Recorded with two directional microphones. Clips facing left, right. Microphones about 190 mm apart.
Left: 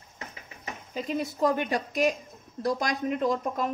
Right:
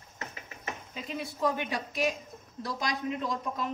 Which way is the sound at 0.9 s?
45° left (ahead or behind).